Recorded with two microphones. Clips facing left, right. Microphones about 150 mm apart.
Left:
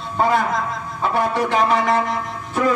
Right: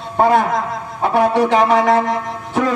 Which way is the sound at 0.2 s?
60° right (ahead or behind).